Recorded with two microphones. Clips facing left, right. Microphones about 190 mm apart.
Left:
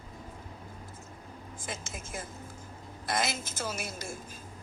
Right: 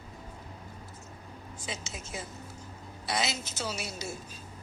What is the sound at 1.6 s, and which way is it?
A woman's voice, 50° left (ahead or behind).